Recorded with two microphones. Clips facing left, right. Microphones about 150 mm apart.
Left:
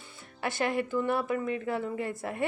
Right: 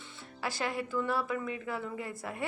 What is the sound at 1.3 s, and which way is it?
Speech, 50° left (ahead or behind).